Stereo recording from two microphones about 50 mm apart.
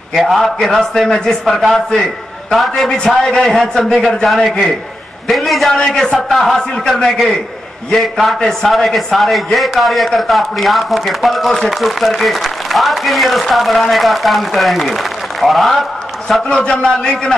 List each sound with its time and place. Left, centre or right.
0.1 s speech: centre
16.4 s a man's voice: left